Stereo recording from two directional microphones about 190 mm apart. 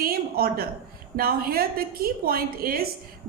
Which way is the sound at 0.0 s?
50° right (ahead or behind).